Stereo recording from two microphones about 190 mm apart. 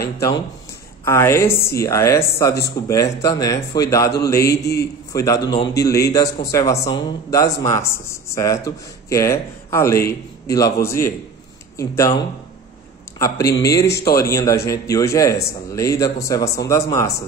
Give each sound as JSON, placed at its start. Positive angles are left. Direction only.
{"t": 1.0, "sound": "speech", "side_deg": 15}
{"t": 4.5, "sound": "a man's voice", "side_deg": 60}
{"t": 5.1, "sound": "speech", "side_deg": 20}
{"t": 13.2, "sound": "speech", "side_deg": 15}